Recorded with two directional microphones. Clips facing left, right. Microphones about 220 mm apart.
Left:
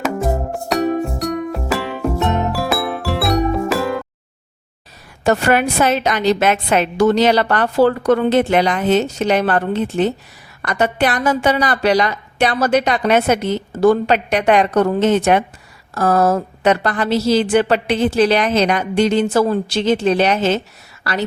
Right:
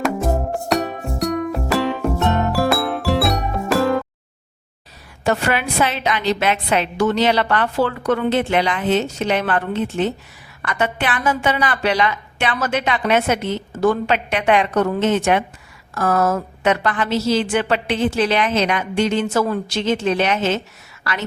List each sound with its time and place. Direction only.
0.0 s music: centre (ahead or behind)
5.2 s a woman's voice: 45° left (ahead or behind)